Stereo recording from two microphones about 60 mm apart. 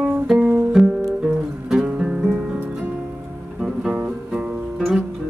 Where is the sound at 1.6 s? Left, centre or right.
Centre.